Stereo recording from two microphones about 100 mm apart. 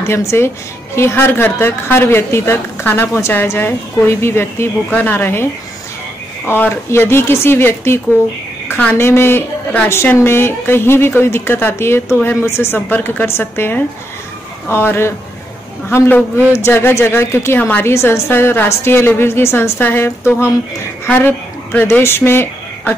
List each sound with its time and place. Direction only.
0.0 s a woman's voice: 25° left (ahead or behind)
16.5 s a woman's voice: 25° left (ahead or behind)